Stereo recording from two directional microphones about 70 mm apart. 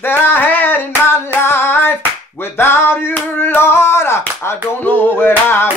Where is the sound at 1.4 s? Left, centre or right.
Left.